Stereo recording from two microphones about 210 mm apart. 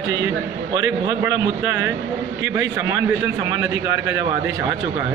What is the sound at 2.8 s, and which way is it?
A man's voice, 15° right (ahead or behind).